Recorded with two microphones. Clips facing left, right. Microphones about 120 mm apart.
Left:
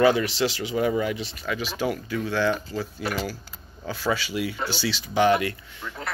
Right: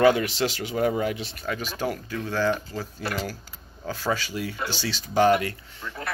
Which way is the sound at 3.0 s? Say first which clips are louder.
Left 1 dB; 20° left (ahead or behind).